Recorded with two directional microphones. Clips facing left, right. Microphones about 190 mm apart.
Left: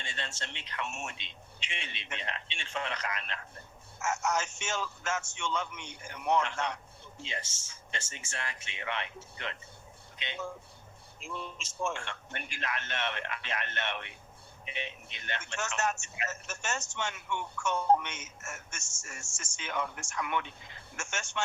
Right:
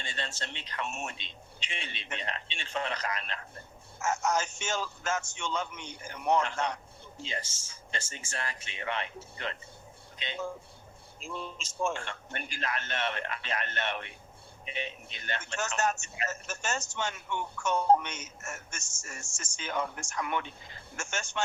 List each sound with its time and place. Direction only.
0.0 s a man's voice: 35° right (ahead or behind)